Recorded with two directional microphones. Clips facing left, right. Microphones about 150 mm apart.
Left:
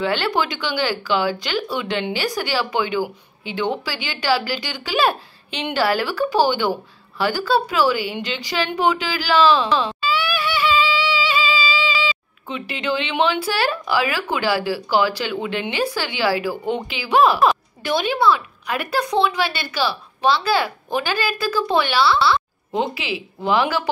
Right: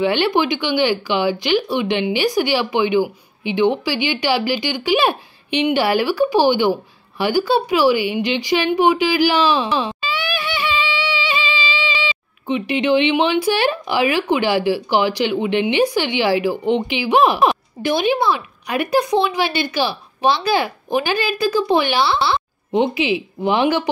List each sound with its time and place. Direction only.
0.0 s a woman's voice: 15° right (ahead or behind)